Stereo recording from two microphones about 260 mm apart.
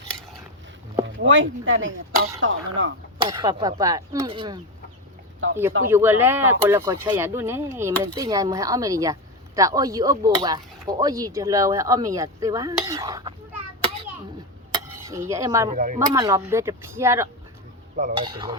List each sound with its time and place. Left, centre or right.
1.0 s speech: right
3.2 s speech: centre
5.4 s speech: right
5.9 s speech: centre
14.7 s dishes: centre
15.7 s speech: right
16.0 s speech: centre